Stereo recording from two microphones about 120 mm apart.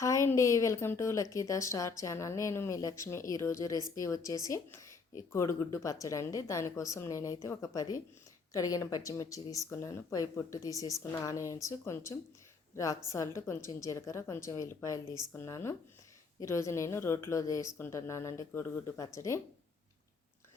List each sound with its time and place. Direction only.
0.0 s a woman's voice: 25° left (ahead or behind)